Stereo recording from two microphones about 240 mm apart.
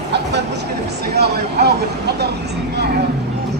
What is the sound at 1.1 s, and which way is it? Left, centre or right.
Vehicle, right.